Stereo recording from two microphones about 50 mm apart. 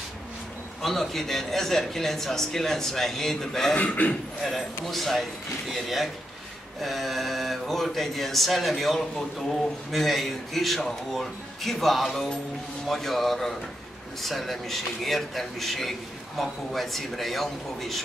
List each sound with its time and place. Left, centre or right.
0.8 s a man's voice: centre
3.8 s a man's voice: left
4.5 s a man's voice: centre